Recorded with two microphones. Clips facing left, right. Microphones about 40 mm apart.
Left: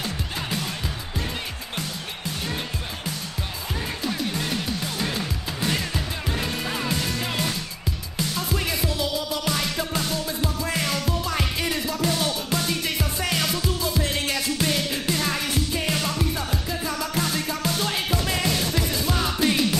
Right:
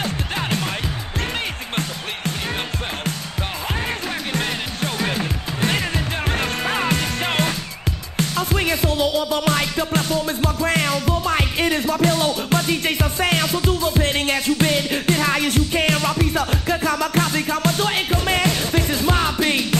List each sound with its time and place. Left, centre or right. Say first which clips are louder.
4.3 s music: right 3 dB; right
6.2 s music: right 6 dB; right
13.4 s music: right 4 dB; right
13.7 s music: right 6 dB; right
15.4 s music: right 7 dB; right
17.7 s music: right 5 dB; right
18.5 s music: right 3 dB; right
18.8 s music: right 5 dB; right